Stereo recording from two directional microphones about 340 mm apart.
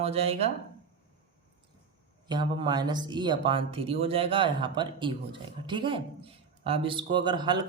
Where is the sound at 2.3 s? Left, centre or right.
Centre.